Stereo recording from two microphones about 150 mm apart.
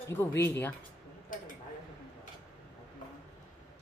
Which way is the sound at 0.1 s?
15° left (ahead or behind).